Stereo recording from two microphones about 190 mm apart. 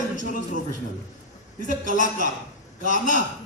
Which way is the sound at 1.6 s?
45° right (ahead or behind).